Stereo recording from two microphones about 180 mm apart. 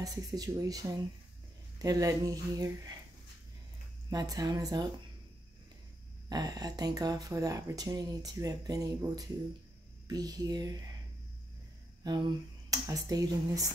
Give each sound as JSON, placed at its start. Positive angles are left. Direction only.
{"t": 0.0, "sound": "speech", "side_deg": -20}
{"t": 4.1, "sound": "speech", "side_deg": -20}
{"t": 6.2, "sound": "speech", "side_deg": -20}
{"t": 12.0, "sound": "speech", "side_deg": -20}